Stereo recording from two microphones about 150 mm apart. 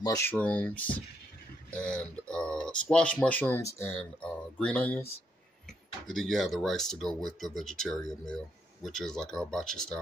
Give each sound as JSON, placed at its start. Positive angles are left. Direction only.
{"t": 0.0, "sound": "speech", "side_deg": 25}
{"t": 0.3, "sound": "speech", "side_deg": 10}